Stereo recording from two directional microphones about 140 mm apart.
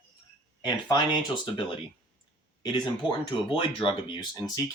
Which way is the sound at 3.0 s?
35° left (ahead or behind).